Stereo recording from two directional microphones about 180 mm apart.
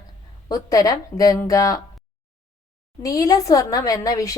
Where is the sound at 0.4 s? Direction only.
20° left (ahead or behind).